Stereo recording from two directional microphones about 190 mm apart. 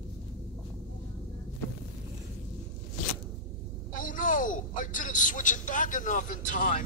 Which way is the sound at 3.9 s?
45° left (ahead or behind).